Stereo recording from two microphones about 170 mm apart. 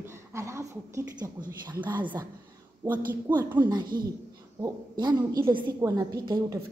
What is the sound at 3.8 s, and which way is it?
Speech, 55° right (ahead or behind).